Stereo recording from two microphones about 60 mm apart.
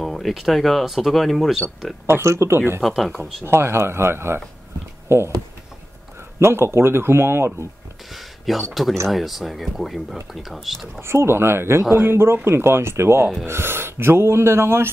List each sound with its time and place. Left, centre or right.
0.0 s speech: centre
2.0 s speech: right
3.0 s speech: centre
3.4 s speech: right
6.4 s speech: right
8.1 s speech: centre
11.0 s speech: right